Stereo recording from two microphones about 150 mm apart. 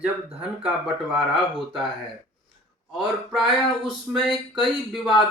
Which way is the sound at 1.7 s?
35° right (ahead or behind).